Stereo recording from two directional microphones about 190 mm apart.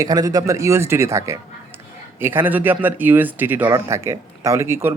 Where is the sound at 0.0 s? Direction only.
20° right (ahead or behind).